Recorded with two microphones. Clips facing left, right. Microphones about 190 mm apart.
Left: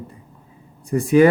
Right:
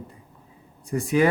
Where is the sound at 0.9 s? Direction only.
55° left (ahead or behind).